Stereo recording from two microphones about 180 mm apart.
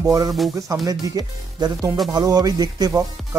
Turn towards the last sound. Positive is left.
turn(degrees=-20)  # may be behind; listen again after turning